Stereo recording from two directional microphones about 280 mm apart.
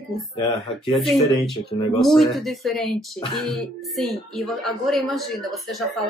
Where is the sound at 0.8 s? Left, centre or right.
Centre.